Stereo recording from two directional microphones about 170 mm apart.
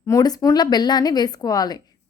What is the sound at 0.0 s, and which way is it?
A woman's voice, 20° left (ahead or behind).